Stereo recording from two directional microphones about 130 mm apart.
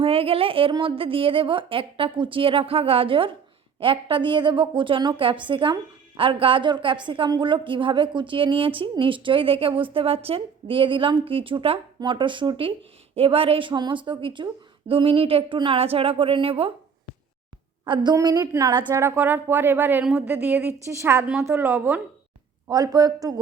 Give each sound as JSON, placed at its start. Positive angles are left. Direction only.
{"t": 0.0, "sound": "a woman's voice", "side_deg": -45}
{"t": 17.8, "sound": "a woman's voice", "side_deg": -35}
{"t": 18.9, "sound": "a woman's voice", "side_deg": -15}
{"t": 22.7, "sound": "a woman's voice", "side_deg": -30}